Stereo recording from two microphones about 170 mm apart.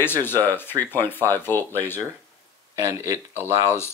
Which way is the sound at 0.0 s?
10° left (ahead or behind).